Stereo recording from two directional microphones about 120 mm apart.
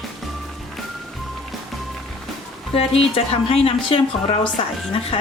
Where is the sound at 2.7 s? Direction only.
55° left (ahead or behind).